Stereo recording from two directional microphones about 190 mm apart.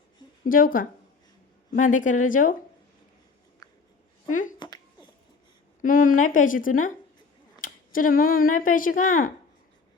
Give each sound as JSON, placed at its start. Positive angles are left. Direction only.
{"t": 0.4, "sound": "a woman's voice", "side_deg": 45}
{"t": 3.6, "sound": "a sound", "side_deg": 20}
{"t": 5.8, "sound": "a woman's voice", "side_deg": 45}